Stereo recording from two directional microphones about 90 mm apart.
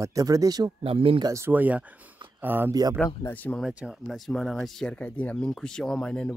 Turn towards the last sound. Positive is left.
turn(degrees=10)  # may be behind; listen again after turning